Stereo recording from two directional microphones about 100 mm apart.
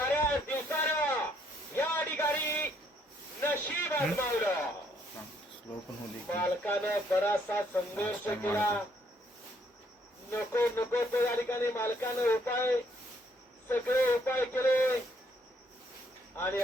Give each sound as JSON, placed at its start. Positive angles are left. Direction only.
{"t": 0.0, "sound": "a sound", "side_deg": 25}
{"t": 3.4, "sound": "snake", "side_deg": 20}
{"t": 4.2, "sound": "a sound", "side_deg": 25}
{"t": 6.3, "sound": "speech", "side_deg": 20}
{"t": 10.3, "sound": "speech", "side_deg": 25}
{"t": 16.3, "sound": "speech", "side_deg": 20}